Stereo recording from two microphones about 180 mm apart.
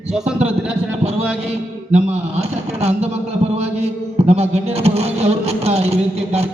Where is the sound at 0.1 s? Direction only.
5° right (ahead or behind).